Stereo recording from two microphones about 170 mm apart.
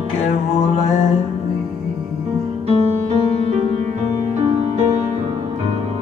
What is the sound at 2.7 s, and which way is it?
Music, 40° right (ahead or behind).